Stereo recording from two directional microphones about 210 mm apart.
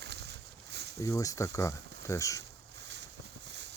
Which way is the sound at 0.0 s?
55° right (ahead or behind).